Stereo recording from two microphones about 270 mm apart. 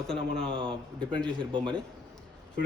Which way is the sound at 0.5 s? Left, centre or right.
Centre.